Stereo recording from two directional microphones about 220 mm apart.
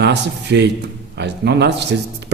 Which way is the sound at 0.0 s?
50° right (ahead or behind).